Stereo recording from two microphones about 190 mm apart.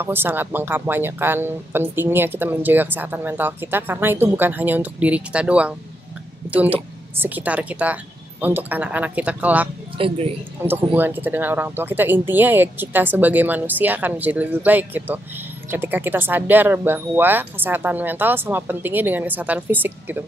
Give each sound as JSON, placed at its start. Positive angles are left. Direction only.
{"t": 0.0, "sound": "speech", "side_deg": -10}
{"t": 9.9, "sound": "speech", "side_deg": -30}
{"t": 10.6, "sound": "speech", "side_deg": -10}